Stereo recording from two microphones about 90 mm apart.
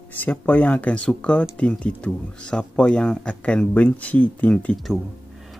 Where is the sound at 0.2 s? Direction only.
20° left (ahead or behind).